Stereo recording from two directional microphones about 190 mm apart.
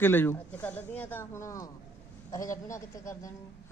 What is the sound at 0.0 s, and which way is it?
Speech, 10° left (ahead or behind).